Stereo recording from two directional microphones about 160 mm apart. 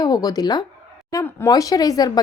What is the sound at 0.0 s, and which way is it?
A woman's voice, 25° left (ahead or behind).